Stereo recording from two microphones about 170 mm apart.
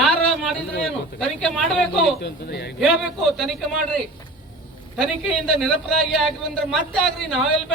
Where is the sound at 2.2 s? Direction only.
80° left.